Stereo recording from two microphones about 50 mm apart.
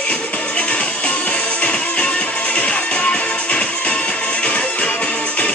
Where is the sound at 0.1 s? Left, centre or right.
Left.